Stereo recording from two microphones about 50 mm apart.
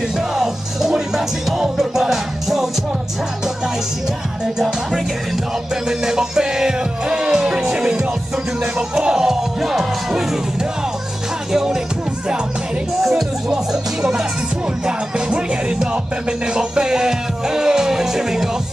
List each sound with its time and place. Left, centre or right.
0.3 s music: centre
4.6 s music: centre
14.9 s music: centre